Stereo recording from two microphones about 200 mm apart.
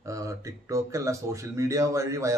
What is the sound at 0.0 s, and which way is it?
A man's voice, 15° right (ahead or behind).